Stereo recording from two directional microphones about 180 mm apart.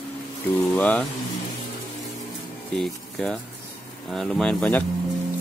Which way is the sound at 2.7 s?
Centre (ahead or behind).